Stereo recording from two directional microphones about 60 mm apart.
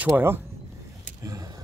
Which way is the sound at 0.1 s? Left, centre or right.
Right.